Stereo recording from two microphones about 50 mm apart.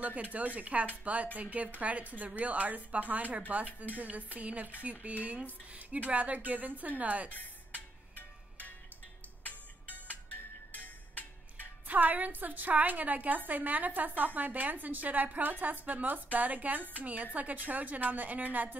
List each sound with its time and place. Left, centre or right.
0.0 s a woman's voice: right
7.3 s music: left
9.8 s music: left
11.9 s a woman's voice: right